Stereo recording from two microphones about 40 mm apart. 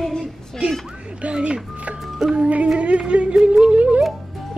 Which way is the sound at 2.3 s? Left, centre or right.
Right.